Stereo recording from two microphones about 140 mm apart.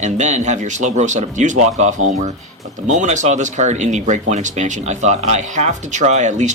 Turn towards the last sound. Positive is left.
turn(degrees=-55)  # may be behind; listen again after turning